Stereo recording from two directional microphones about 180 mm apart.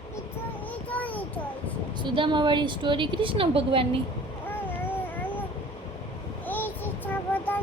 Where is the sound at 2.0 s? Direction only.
25° right (ahead or behind).